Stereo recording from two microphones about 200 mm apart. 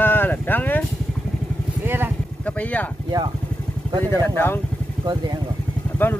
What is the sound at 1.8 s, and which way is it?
Speech, 10° right (ahead or behind).